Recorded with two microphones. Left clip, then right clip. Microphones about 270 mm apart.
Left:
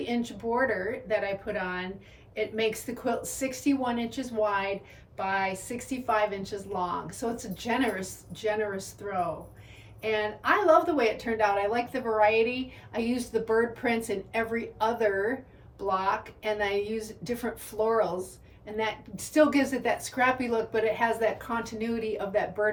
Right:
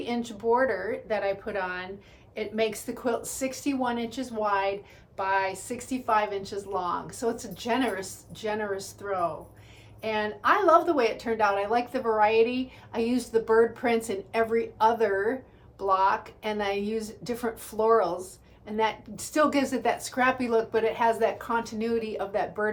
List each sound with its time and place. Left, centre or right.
0.0 s a woman's voice: centre